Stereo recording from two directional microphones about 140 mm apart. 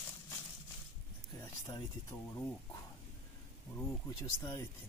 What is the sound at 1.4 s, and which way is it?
Speech, 20° left (ahead or behind).